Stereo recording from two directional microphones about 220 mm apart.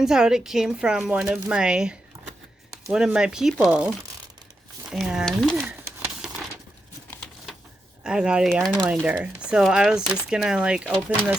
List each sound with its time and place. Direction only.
0.0 s speech: 5° right (ahead or behind)
6.2 s a sound: 5° right (ahead or behind)
8.0 s speech: 5° right (ahead or behind)
8.6 s speech: 15° right (ahead or behind)
8.9 s speech: 5° right (ahead or behind)